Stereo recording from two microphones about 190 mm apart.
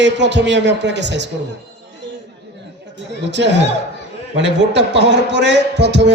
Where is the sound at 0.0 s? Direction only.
65° right (ahead or behind).